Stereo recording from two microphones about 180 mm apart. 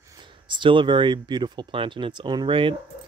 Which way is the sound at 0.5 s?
25° right (ahead or behind).